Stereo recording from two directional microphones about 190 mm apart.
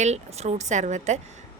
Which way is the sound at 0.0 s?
35° right (ahead or behind).